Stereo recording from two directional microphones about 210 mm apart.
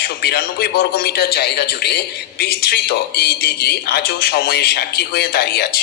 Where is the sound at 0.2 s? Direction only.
50° left (ahead or behind).